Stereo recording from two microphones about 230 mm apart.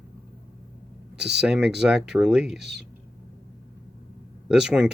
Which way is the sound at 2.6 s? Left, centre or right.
Right.